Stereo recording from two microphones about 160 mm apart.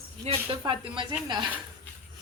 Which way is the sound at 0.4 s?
30° right (ahead or behind).